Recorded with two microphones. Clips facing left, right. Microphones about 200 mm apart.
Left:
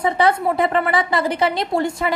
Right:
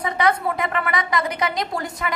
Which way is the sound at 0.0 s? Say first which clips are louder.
Left 4 dB; 30° left (ahead or behind).